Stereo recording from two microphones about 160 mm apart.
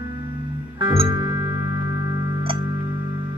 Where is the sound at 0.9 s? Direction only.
30° right (ahead or behind).